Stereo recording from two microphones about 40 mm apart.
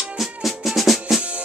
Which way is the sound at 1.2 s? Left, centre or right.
Right.